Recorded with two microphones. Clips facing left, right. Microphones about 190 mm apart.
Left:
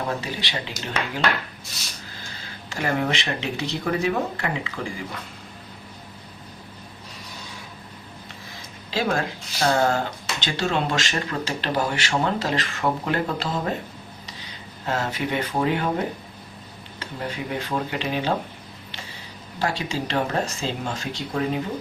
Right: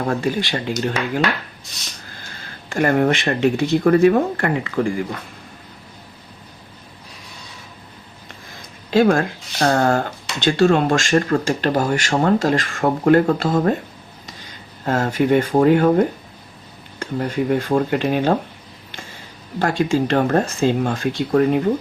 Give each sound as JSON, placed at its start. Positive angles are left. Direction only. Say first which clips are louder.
{"t": 0.1, "sound": "speech", "louder": "right 8 dB", "side_deg": -50}
{"t": 2.6, "sound": "speech", "louder": "right 8 dB", "side_deg": -55}
{"t": 8.9, "sound": "speech", "louder": "right 9 dB", "side_deg": -50}
{"t": 19.5, "sound": "speech", "louder": "right 8 dB", "side_deg": -50}